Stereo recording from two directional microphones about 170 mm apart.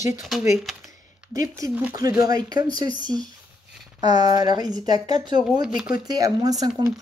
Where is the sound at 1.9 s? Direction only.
20° right (ahead or behind).